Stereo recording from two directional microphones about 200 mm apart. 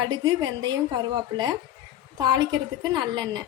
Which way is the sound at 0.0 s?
20° right (ahead or behind).